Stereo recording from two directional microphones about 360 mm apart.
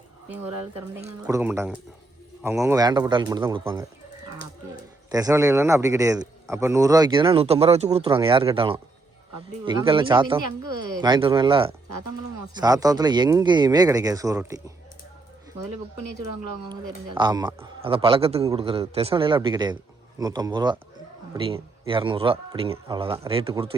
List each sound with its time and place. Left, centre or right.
0.9 s a man's voice: centre
5.1 s a man's voice: centre
16.6 s a man's voice: centre